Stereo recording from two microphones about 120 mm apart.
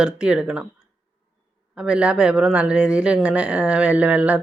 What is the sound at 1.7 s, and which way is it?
Speech, 10° right (ahead or behind).